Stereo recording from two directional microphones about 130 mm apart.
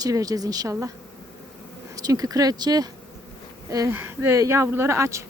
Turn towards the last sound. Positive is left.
turn(degrees=-20)  # may be behind; listen again after turning